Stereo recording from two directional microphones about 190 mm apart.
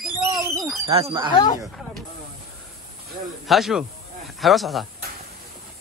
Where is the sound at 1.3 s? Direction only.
20° left (ahead or behind).